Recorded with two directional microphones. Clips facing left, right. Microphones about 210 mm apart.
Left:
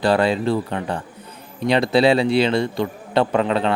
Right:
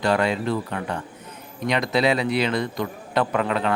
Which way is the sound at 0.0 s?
30° left (ahead or behind).